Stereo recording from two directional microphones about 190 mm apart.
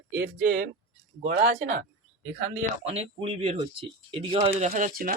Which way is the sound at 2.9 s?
35° right (ahead or behind).